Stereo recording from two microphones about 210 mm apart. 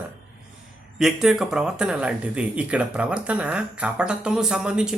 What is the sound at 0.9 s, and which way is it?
Speech, centre (ahead or behind).